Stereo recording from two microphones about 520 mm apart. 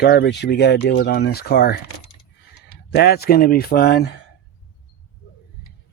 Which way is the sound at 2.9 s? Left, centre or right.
Centre.